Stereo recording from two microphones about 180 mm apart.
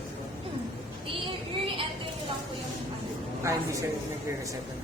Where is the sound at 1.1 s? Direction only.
30° right (ahead or behind).